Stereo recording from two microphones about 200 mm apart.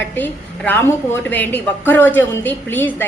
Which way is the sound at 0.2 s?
10° left (ahead or behind).